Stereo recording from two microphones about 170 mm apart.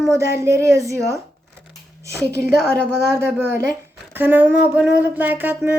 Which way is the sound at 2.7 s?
15° right (ahead or behind).